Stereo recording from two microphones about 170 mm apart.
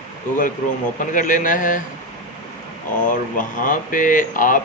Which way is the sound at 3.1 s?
50° left (ahead or behind).